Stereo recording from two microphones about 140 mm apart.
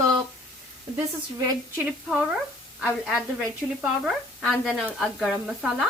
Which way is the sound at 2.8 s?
5° right (ahead or behind).